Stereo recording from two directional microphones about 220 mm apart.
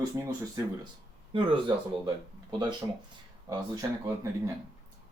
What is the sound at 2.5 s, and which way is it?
Speech, 20° right (ahead or behind).